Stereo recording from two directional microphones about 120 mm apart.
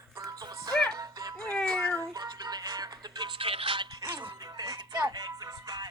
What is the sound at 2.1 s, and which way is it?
Music, 35° right (ahead or behind).